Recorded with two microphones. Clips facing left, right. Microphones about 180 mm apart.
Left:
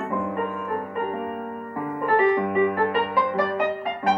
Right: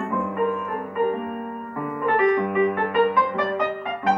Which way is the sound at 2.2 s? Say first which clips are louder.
Even; 30° left (ahead or behind).